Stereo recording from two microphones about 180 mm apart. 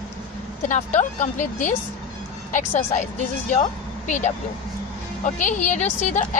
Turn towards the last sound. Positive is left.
turn(degrees=40)  # may be behind; listen again after turning